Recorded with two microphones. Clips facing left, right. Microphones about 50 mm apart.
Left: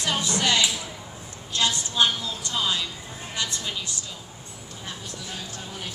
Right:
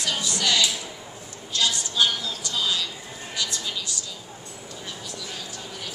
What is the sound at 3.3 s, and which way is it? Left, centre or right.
Vehicle, left.